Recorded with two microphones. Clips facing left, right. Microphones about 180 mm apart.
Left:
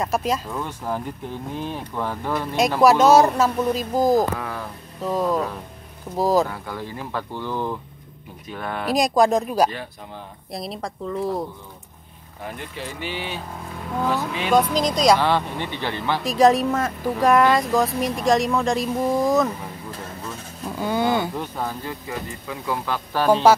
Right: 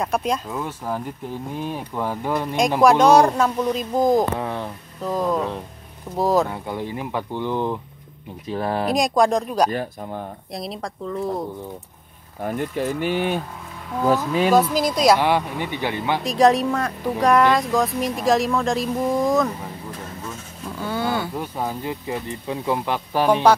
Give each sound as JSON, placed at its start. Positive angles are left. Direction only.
{"t": 0.0, "sound": "speech", "side_deg": 0}
{"t": 2.8, "sound": "speech", "side_deg": 5}
{"t": 4.4, "sound": "speech", "side_deg": -25}
{"t": 5.0, "sound": "speech", "side_deg": 0}
{"t": 6.5, "sound": "speech", "side_deg": -20}
{"t": 8.5, "sound": "speech", "side_deg": -30}
{"t": 8.9, "sound": "speech", "side_deg": 0}
{"t": 9.7, "sound": "speech", "side_deg": -45}
{"t": 10.5, "sound": "speech", "side_deg": 0}
{"t": 12.4, "sound": "speech", "side_deg": -45}
{"t": 14.5, "sound": "speech", "side_deg": -5}
{"t": 16.3, "sound": "speech", "side_deg": 0}
{"t": 20.8, "sound": "speech", "side_deg": 15}
{"t": 21.4, "sound": "speech", "side_deg": -15}